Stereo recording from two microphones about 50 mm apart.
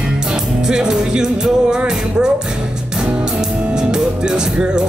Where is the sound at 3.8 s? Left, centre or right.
Centre.